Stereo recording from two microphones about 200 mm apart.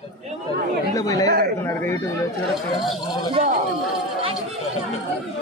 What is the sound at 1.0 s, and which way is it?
Speech, 15° left (ahead or behind).